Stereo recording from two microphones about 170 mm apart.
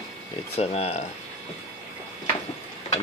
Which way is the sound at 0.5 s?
35° left (ahead or behind).